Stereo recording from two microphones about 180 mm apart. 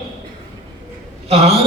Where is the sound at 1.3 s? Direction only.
35° right (ahead or behind).